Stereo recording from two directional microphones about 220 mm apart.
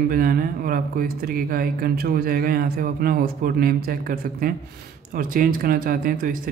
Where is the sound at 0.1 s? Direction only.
40° right (ahead or behind).